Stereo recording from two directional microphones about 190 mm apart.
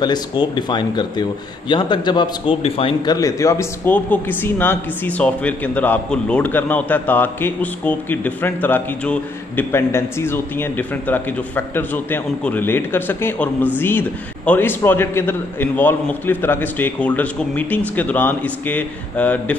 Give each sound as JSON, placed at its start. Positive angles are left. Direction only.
{"t": 0.0, "sound": "a man's voice", "side_deg": 25}
{"t": 3.2, "sound": "speech", "side_deg": 15}